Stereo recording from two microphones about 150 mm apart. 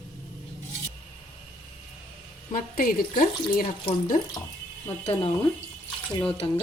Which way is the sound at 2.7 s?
70° left (ahead or behind).